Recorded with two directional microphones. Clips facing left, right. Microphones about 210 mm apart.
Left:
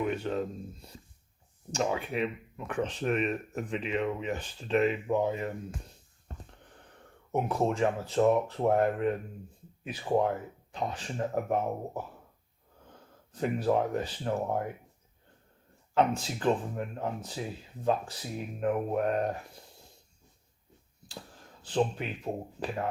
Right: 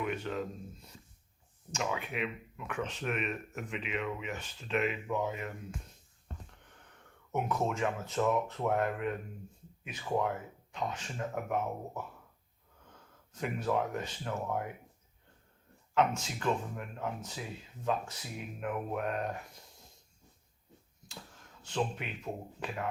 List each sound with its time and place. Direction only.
0.0 s speech: 35° left (ahead or behind)
6.2 s a sound: 35° left (ahead or behind)
7.3 s speech: 30° left (ahead or behind)
16.0 s speech: 35° left (ahead or behind)
21.1 s speech: 35° left (ahead or behind)